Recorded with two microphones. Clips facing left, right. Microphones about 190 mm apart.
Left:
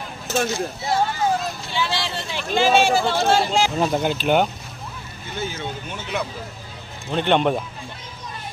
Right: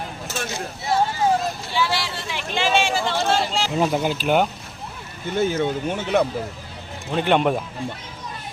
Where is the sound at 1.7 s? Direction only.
20° left (ahead or behind).